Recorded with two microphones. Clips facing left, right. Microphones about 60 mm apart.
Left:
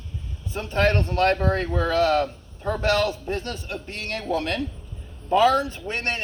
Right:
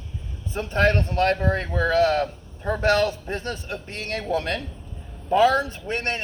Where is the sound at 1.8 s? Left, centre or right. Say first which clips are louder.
Right 1 dB; right.